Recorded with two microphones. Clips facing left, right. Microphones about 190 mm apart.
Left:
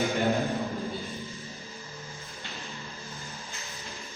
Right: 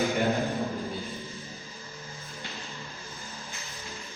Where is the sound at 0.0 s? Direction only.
Centre (ahead or behind).